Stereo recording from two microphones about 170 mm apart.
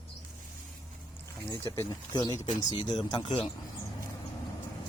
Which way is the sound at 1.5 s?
20° left (ahead or behind).